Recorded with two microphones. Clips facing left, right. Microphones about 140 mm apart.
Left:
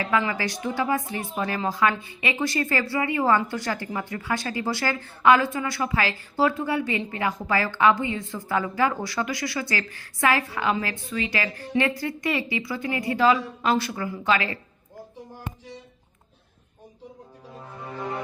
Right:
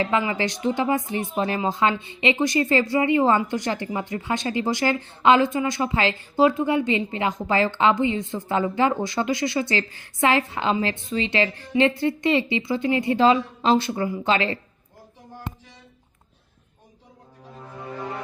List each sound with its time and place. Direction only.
0.0 s speech: 20° right (ahead or behind)